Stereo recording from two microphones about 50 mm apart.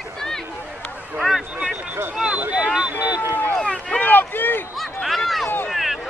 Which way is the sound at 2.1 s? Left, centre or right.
Centre.